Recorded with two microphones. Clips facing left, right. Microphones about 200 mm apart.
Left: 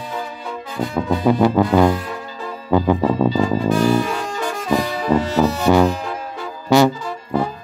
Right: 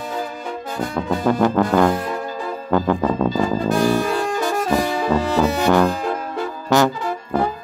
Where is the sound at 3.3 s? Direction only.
45° right (ahead or behind).